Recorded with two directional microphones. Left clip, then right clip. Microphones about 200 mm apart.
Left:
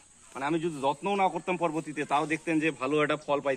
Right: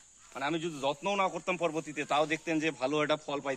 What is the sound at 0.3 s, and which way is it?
Speech, 60° right (ahead or behind).